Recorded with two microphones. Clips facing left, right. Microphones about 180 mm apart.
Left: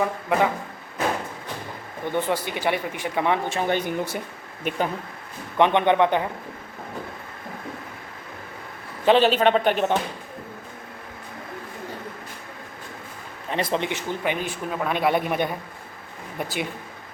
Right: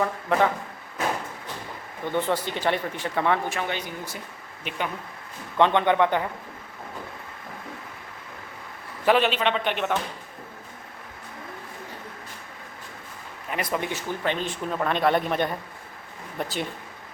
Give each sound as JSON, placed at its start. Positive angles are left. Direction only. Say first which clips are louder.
{"t": 0.0, "sound": "speech", "louder": "left 1 dB", "side_deg": 15}
{"t": 2.1, "sound": "speech", "louder": "even", "side_deg": 15}
{"t": 3.6, "sound": "speech", "louder": "left 7 dB", "side_deg": 50}
{"t": 4.7, "sound": "speech", "louder": "left 8 dB", "side_deg": 50}
{"t": 5.5, "sound": "a man's voice", "louder": "left 2 dB", "side_deg": 15}
{"t": 9.0, "sound": "a man's voice", "louder": "left 4 dB", "side_deg": 30}
{"t": 13.5, "sound": "speech", "louder": "left 3 dB", "side_deg": 25}